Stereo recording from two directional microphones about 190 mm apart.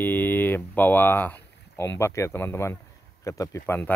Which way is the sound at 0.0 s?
10° left (ahead or behind).